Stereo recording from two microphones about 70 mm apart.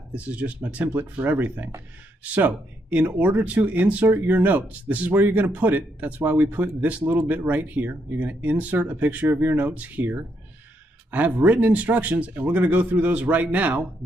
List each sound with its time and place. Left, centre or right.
0.1 s speech: centre